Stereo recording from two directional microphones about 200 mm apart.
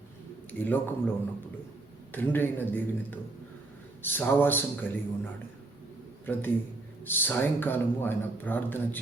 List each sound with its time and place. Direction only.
0.6 s speech: 10° left (ahead or behind)
2.1 s speech: 10° left (ahead or behind)